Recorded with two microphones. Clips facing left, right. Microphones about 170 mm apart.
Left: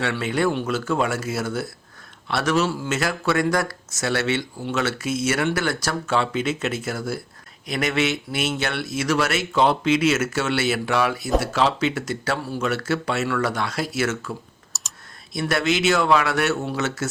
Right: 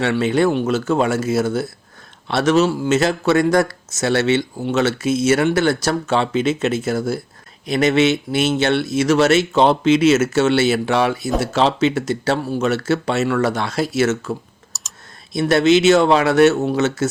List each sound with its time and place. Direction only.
0.0 s speech: 25° right (ahead or behind)
14.7 s computer keyboard: centre (ahead or behind)
15.3 s speech: 25° right (ahead or behind)